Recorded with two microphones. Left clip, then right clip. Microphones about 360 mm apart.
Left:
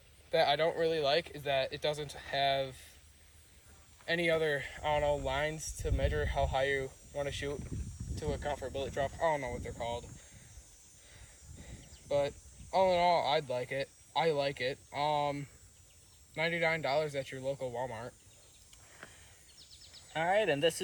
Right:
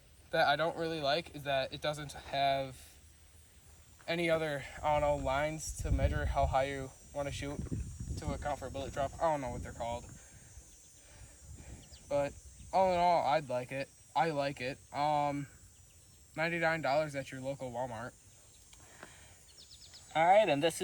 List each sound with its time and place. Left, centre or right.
0.3 s speech: centre
4.0 s speech: centre
5.1 s speech: centre
5.5 s speech: centre
11.8 s cricket: centre
12.7 s speech: centre
17.7 s speech: centre
18.9 s a sound: centre
20.1 s speech: centre